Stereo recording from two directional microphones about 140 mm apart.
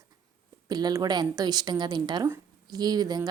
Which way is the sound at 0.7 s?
30° right (ahead or behind).